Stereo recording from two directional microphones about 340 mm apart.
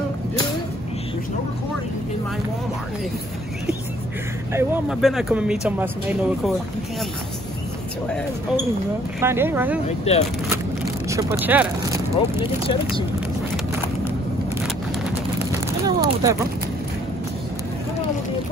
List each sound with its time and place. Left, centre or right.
4.5 s speech: centre
9.2 s speech: centre
9.8 s speech: centre
11.1 s speech: centre
12.4 s speech: centre
15.8 s a sound: centre